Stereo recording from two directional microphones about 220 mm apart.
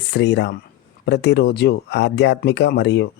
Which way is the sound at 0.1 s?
50° left (ahead or behind).